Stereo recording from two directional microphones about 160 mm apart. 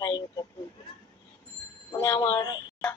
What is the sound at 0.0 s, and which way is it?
Bleat, 25° left (ahead or behind).